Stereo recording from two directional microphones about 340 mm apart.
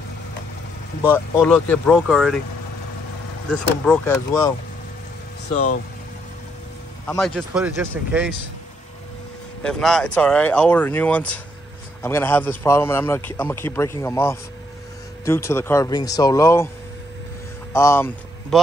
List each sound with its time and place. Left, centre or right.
1.1 s speech: centre
3.8 s a man's voice: centre
7.1 s speech: centre
9.6 s a man's voice: centre
17.7 s a man's voice: centre